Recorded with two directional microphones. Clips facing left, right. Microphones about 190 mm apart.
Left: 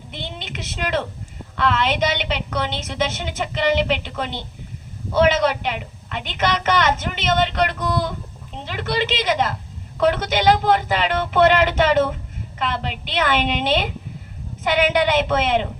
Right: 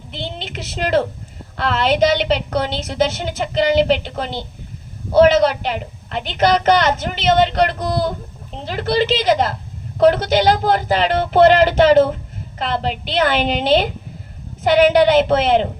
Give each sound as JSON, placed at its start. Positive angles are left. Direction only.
{"t": 0.1, "sound": "a woman's voice", "side_deg": -30}